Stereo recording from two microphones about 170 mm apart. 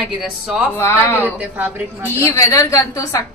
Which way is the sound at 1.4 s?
10° right (ahead or behind).